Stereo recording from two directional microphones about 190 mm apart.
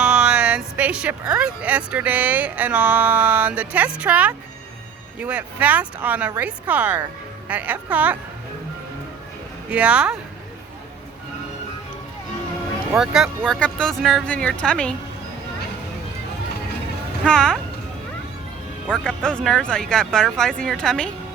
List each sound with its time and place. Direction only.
0.0 s a sound: 5° right (ahead or behind)
1.3 s speech: 5° right (ahead or behind)
9.6 s speech: 5° right (ahead or behind)
13.0 s speech: centre (ahead or behind)
17.2 s speech: 5° left (ahead or behind)
18.9 s speech: 5° left (ahead or behind)